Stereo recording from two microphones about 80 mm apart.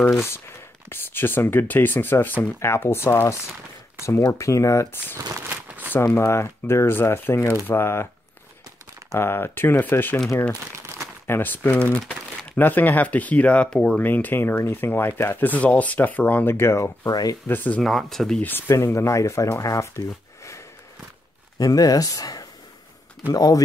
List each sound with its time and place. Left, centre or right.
0.1 s speech: left
5.7 s shuffling cards: right
5.9 s speech: left
9.1 s speech: left
11.2 s speech: left
17.1 s speech: left
17.5 s speech: centre
17.8 s speech: centre
18.7 s speech: left
21.5 s speech: left